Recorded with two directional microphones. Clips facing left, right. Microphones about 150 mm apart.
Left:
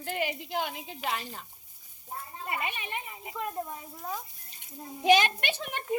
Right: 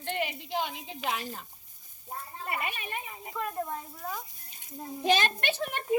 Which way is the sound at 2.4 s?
20° left (ahead or behind).